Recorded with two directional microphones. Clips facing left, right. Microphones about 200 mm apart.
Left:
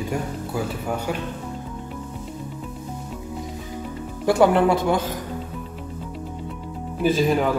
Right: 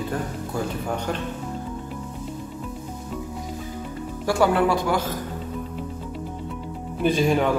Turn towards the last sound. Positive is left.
turn(degrees=0)  # may be behind; listen again after turning